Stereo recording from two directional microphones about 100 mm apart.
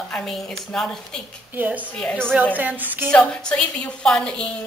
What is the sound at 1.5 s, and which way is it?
Speech, 15° right (ahead or behind).